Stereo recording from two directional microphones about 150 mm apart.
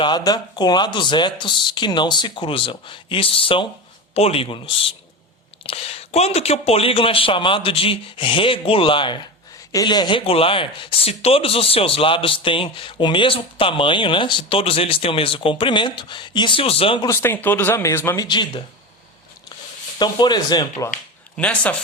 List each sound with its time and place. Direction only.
0.0 s speech: 30° left (ahead or behind)
17.1 s speech: 15° left (ahead or behind)
18.3 s speech: 30° left (ahead or behind)
20.0 s speech: 30° left (ahead or behind)
21.3 s speech: 10° left (ahead or behind)